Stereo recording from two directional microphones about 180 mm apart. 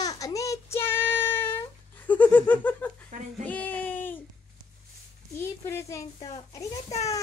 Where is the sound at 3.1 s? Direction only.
45° right (ahead or behind).